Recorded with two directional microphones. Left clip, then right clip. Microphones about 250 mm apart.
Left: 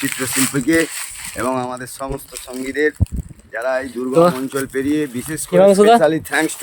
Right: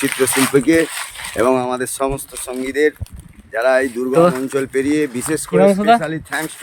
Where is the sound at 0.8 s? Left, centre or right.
Right.